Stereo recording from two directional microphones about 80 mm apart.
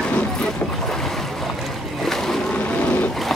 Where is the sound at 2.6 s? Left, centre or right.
Centre.